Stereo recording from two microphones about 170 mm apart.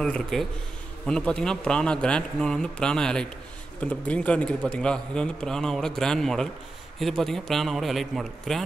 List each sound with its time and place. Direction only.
0.0 s a man's voice: 5° left (ahead or behind)